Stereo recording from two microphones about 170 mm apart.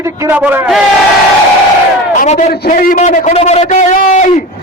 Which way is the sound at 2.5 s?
60° left (ahead or behind).